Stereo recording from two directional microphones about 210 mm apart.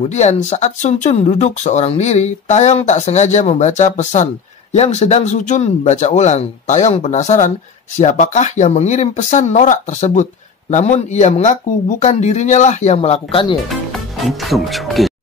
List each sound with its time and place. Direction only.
0.1 s speech: 35° left (ahead or behind)
13.7 s speech: centre (ahead or behind)